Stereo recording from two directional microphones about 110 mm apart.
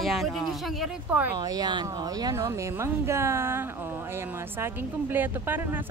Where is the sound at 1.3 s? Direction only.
35° right (ahead or behind); by 5.8 s 15° right (ahead or behind).